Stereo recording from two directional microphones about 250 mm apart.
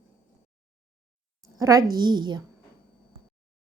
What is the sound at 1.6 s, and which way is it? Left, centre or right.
Speech, centre.